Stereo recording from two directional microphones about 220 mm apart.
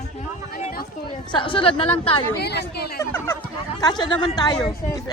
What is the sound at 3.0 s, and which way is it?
A woman's voice, 10° left (ahead or behind).